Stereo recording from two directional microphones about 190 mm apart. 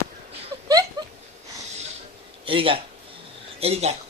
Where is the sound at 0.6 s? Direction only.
20° right (ahead or behind).